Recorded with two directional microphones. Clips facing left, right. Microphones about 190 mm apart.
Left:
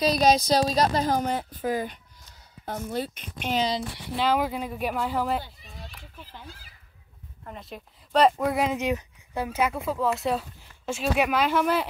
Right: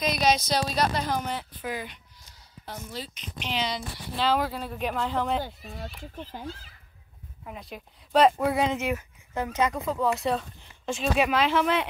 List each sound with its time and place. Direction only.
0.0 s a woman's voice: 35° left (ahead or behind)
4.2 s speech: 10° left (ahead or behind)
7.4 s speech: 5° right (ahead or behind)
8.7 s speech: 15° left (ahead or behind)